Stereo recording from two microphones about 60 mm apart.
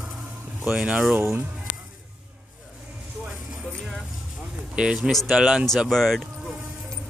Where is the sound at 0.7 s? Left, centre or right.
Centre.